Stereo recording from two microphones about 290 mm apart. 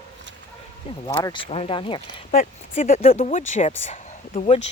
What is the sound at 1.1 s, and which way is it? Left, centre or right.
Speech, centre.